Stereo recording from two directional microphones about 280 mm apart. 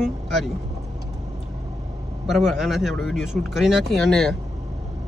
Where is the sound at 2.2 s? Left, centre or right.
Centre.